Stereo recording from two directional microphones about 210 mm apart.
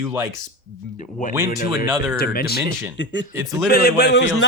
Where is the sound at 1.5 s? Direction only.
45° left (ahead or behind).